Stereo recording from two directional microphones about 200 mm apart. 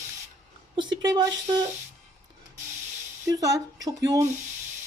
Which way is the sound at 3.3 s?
15° right (ahead or behind).